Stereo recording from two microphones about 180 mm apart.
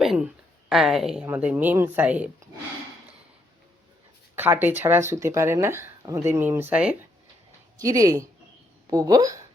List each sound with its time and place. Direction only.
0.0 s a sound: centre (ahead or behind)
0.7 s speech: centre (ahead or behind)
4.4 s speech: 10° right (ahead or behind)
7.8 s speech: 20° right (ahead or behind)